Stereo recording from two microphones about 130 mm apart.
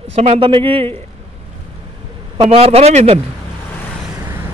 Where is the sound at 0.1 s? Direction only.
55° right (ahead or behind).